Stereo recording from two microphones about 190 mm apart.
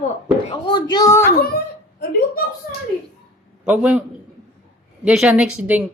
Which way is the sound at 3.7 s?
5° right (ahead or behind).